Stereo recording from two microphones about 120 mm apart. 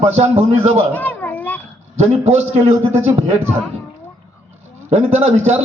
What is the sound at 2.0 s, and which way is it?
Speech, 65° right (ahead or behind).